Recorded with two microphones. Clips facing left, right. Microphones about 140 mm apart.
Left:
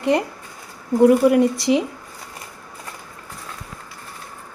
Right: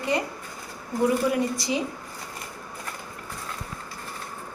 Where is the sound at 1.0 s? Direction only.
65° left (ahead or behind).